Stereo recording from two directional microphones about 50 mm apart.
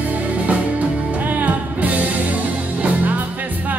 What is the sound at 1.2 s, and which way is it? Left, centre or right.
Music, right.